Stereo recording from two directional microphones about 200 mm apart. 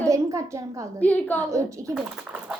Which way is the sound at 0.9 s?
5° left (ahead or behind).